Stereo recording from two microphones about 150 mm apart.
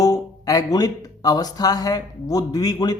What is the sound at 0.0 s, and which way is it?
Speech, 25° left (ahead or behind).